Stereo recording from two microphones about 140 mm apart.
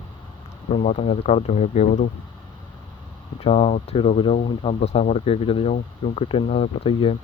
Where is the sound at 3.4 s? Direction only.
40° left (ahead or behind).